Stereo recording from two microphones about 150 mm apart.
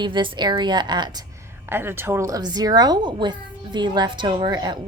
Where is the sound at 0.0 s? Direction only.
35° right (ahead or behind).